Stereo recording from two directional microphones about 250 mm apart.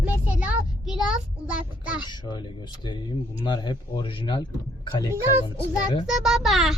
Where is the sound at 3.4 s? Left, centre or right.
Centre.